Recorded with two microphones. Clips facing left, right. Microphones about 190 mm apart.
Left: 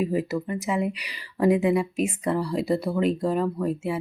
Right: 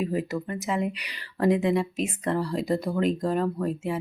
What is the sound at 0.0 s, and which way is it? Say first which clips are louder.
Speech: left 3 dB; 5° left (ahead or behind).